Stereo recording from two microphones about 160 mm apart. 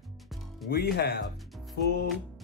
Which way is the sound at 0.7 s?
75° left (ahead or behind).